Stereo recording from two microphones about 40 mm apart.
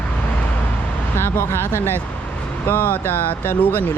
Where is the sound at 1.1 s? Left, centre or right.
Left.